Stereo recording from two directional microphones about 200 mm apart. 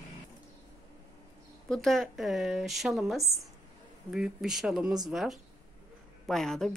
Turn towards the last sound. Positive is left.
turn(degrees=0)  # may be behind; listen again after turning